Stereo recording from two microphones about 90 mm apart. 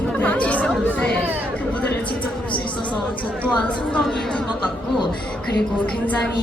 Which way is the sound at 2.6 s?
65° left (ahead or behind).